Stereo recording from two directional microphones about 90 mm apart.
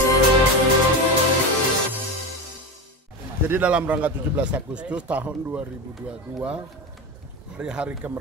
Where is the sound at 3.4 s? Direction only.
15° right (ahead or behind).